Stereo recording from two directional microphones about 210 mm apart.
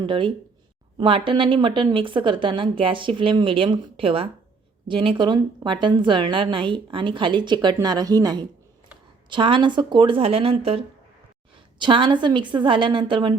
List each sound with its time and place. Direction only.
0.0 s a woman's voice: 25° right (ahead or behind)